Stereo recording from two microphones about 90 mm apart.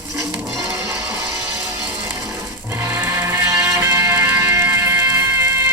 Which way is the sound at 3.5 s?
35° right (ahead or behind).